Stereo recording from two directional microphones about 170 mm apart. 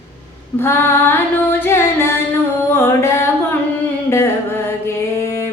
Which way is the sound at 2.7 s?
15° left (ahead or behind).